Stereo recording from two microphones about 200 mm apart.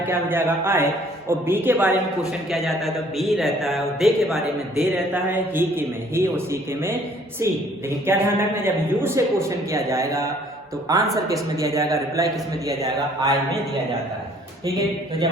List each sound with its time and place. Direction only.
0.1 s a man's voice: 10° right (ahead or behind)
2.5 s a man's voice: centre (ahead or behind); by 13.3 s 20° right (ahead or behind)